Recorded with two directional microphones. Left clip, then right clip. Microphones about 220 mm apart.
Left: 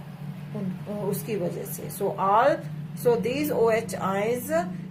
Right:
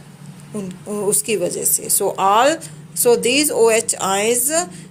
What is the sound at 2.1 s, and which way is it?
Speech, 50° right (ahead or behind).